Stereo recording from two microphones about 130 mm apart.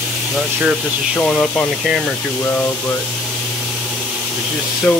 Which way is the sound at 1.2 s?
5° left (ahead or behind).